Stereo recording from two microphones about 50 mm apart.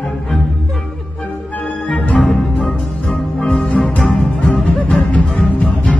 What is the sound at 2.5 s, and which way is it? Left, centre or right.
Music, left.